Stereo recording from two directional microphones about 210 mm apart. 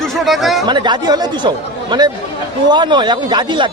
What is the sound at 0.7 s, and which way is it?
Speech, 20° right (ahead or behind).